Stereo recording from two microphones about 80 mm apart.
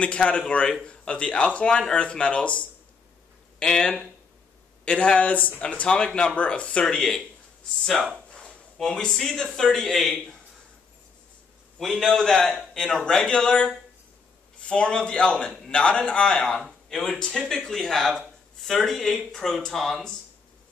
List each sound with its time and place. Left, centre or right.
0.0 s a man's voice: centre
8.3 s speech: centre
11.8 s a man's voice: centre